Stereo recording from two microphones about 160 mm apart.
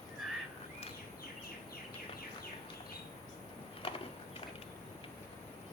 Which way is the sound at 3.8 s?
35° left (ahead or behind).